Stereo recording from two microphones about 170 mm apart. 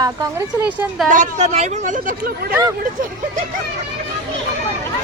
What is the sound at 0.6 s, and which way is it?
Speech, 10° right (ahead or behind).